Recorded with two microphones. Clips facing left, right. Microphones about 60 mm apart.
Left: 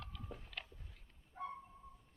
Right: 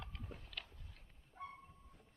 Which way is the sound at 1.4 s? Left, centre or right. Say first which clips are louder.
Left 5 dB; left.